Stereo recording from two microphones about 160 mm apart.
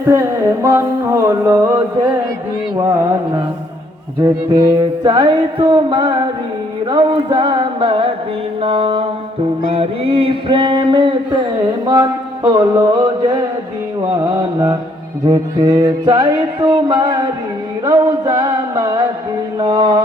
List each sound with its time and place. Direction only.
0.0 s a sound: 15° right (ahead or behind)
2.8 s music: 20° right (ahead or behind)
4.7 s music: 30° right (ahead or behind)
6.9 s mantra: 30° right (ahead or behind)
12.5 s music: 25° right (ahead or behind)